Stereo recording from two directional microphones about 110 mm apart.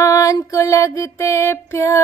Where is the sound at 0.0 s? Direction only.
30° left (ahead or behind).